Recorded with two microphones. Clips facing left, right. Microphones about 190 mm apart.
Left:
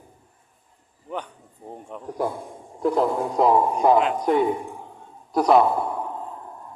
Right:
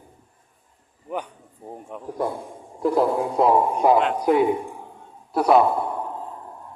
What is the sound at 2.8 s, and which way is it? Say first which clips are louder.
A man's voice: right 1 dB; 5° right (ahead or behind).